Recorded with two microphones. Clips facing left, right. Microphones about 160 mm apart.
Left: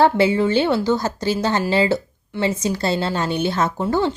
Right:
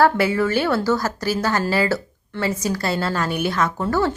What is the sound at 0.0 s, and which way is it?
A woman's voice, 25° left (ahead or behind).